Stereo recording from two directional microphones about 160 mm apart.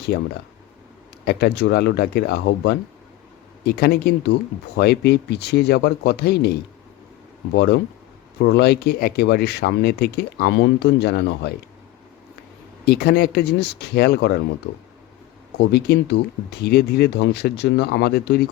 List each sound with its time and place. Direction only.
0.1 s speech: 70° left (ahead or behind); by 11.5 s 90° left
12.8 s speech: 80° left
15.5 s speech: 90° left